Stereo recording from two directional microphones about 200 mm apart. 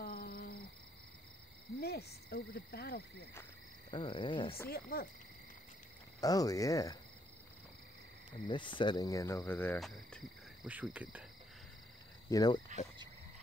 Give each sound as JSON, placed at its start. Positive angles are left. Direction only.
{"t": 0.0, "sound": "a sound", "side_deg": 50}
{"t": 1.8, "sound": "cricket", "side_deg": 50}
{"t": 3.9, "sound": "cricket", "side_deg": 25}
{"t": 4.6, "sound": "cricket", "side_deg": 50}
{"t": 6.2, "sound": "cricket", "side_deg": 15}
{"t": 8.5, "sound": "cricket", "side_deg": 25}
{"t": 12.3, "sound": "cricket", "side_deg": 15}